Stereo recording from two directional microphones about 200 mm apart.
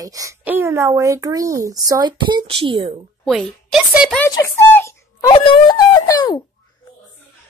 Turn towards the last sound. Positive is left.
turn(degrees=20)  # may be behind; listen again after turning